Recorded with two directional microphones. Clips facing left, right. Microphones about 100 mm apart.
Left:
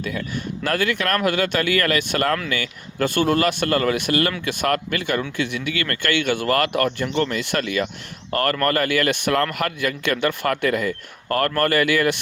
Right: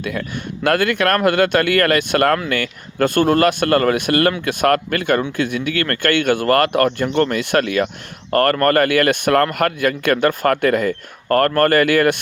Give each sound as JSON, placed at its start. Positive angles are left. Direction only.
{"t": 0.0, "sound": "speech", "side_deg": -65}